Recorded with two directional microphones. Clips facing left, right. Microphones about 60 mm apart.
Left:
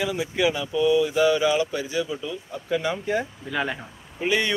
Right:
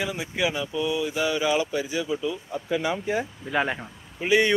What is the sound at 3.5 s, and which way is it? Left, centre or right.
Speech, right.